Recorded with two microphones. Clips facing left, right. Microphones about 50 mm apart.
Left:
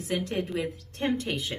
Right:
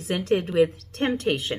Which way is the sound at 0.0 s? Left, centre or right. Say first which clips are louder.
Right 6 dB; right.